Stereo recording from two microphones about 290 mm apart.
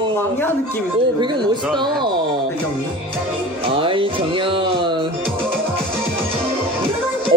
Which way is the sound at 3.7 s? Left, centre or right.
Centre.